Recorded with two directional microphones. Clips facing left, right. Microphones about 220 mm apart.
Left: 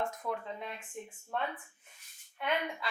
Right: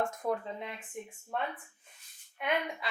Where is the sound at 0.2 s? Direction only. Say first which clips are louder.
Right 8 dB; 40° right (ahead or behind).